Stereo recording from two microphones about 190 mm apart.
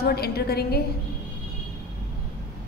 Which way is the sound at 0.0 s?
55° left (ahead or behind).